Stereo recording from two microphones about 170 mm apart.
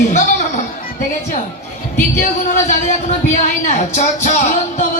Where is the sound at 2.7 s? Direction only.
45° left (ahead or behind).